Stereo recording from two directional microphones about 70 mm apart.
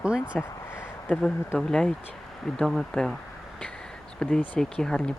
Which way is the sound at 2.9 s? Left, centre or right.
Centre.